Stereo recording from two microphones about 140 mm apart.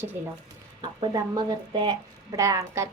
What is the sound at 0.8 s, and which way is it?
A woman's voice, 30° right (ahead or behind).